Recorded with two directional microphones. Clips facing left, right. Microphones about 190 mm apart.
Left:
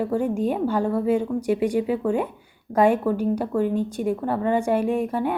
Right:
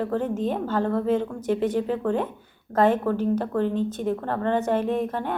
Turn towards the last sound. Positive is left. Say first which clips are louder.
# left 3 dB
turn(degrees=10)  # may be behind; listen again after turning